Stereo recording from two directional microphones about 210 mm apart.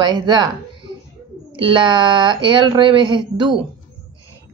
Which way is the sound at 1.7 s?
20° right (ahead or behind).